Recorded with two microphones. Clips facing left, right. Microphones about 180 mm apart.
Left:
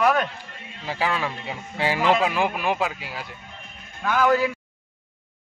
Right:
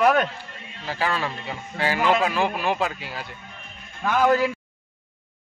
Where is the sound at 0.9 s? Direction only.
10° left (ahead or behind).